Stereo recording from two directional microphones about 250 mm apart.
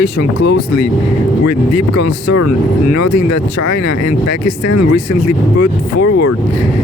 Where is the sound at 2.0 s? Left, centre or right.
Left.